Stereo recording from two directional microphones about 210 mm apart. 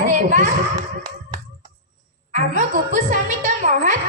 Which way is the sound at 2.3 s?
35° right (ahead or behind).